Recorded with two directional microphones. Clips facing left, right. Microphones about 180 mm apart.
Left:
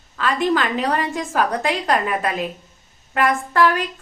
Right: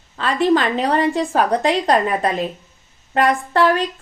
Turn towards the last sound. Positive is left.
turn(degrees=-35)  # may be behind; listen again after turning